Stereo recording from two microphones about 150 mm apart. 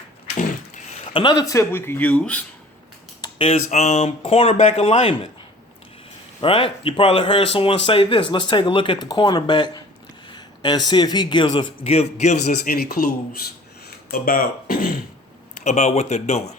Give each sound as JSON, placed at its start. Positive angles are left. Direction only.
{"t": 1.1, "sound": "speech", "side_deg": 30}
{"t": 3.2, "sound": "speech", "side_deg": 40}
{"t": 6.4, "sound": "speech", "side_deg": 35}
{"t": 12.6, "sound": "speech", "side_deg": 90}
{"t": 15.6, "sound": "speech", "side_deg": 50}